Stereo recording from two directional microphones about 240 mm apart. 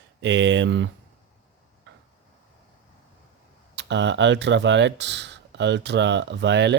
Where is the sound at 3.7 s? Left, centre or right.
Right.